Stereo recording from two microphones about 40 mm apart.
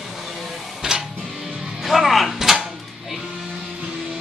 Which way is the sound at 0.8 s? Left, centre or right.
Centre.